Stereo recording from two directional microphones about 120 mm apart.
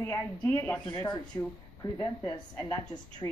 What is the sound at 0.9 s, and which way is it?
A woman's voice, 30° left (ahead or behind).